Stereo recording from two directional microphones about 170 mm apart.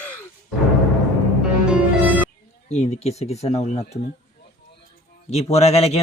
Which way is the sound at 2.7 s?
40° left (ahead or behind).